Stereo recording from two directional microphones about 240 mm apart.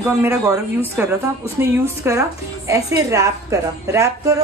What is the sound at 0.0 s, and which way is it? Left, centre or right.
A woman's voice, centre.